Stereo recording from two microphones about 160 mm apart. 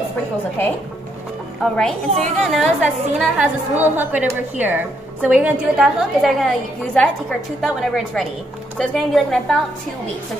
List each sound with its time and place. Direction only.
1.6 s a woman's voice: 5° left (ahead or behind)